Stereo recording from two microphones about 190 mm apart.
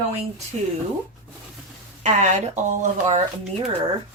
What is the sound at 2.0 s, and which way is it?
Speech, 40° right (ahead or behind).